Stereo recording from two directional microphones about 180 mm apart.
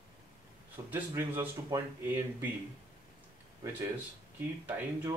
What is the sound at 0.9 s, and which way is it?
Speech, 10° right (ahead or behind).